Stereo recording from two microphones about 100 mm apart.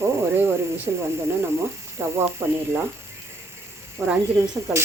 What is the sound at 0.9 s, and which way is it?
Speech, 20° right (ahead or behind).